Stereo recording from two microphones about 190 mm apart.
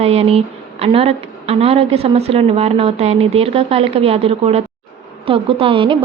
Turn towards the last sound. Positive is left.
turn(degrees=-25)  # may be behind; listen again after turning